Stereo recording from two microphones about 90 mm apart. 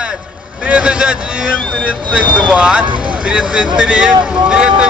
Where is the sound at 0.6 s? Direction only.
10° right (ahead or behind).